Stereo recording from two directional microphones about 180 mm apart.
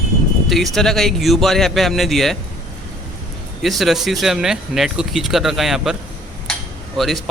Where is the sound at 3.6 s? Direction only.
Centre (ahead or behind).